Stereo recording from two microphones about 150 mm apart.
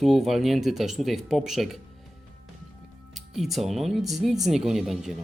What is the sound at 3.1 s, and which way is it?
Speech, centre (ahead or behind).